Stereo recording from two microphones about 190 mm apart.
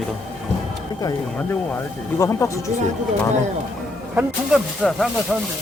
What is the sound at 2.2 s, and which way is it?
Speech, 15° left (ahead or behind).